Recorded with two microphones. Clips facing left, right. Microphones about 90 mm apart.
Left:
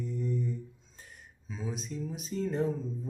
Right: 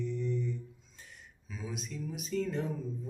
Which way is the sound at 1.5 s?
30° left (ahead or behind).